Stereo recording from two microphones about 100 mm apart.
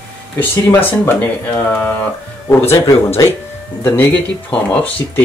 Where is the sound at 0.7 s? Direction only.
20° left (ahead or behind).